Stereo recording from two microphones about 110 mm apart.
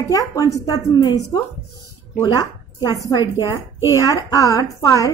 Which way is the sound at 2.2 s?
35° left (ahead or behind).